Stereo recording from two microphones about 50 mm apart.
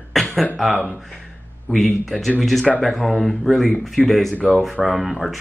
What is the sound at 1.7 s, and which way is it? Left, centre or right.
Speech, centre.